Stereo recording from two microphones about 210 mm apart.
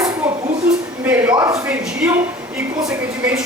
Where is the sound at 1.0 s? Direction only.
10° right (ahead or behind).